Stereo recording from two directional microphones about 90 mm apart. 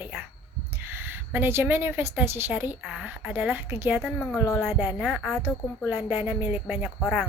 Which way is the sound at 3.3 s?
20° right (ahead or behind).